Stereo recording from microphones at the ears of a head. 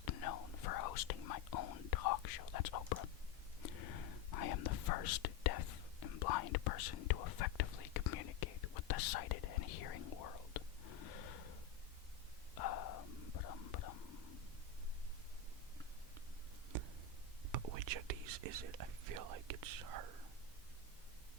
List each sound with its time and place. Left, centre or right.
0.0 s whispering: left
12.5 s whispering: left
17.5 s whispering: right